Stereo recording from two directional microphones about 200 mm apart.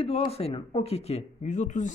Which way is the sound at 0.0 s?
30° left (ahead or behind).